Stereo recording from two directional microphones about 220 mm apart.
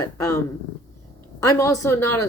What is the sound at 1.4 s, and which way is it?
Speech, 15° left (ahead or behind).